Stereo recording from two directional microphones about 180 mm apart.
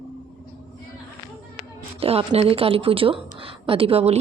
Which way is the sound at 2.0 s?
35° right (ahead or behind).